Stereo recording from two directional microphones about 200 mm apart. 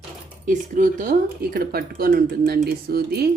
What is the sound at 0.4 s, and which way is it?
Speech, 40° right (ahead or behind).